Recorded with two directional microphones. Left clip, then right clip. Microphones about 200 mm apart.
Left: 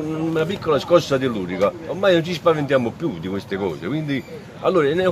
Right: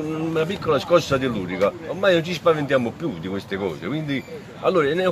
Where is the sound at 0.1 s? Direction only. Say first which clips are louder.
Left 2 dB; 10° left (ahead or behind).